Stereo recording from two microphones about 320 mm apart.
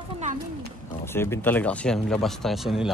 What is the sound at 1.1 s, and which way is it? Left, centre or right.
Speech, centre.